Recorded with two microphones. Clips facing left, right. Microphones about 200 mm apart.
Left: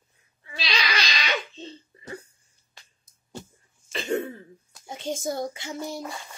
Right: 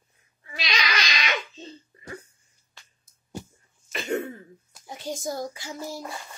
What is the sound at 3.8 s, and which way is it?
Cough, 30° left (ahead or behind).